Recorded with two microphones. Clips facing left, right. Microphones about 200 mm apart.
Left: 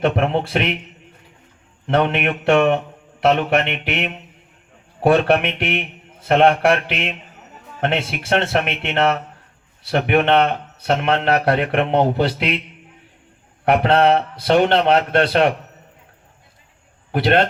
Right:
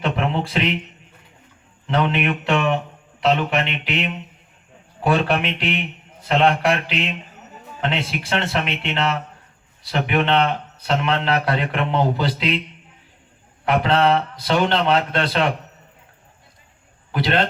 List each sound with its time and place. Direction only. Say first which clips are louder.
0.0 s a man's voice: left 4 dB; 55° left (ahead or behind)
1.9 s a man's voice: left 2 dB; 55° left (ahead or behind)
13.7 s a man's voice: left 3 dB; 60° left (ahead or behind)
17.1 s a man's voice: left 4 dB; 55° left (ahead or behind)